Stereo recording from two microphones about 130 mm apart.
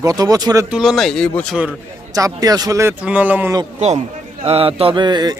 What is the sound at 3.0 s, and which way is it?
Speech, 10° right (ahead or behind).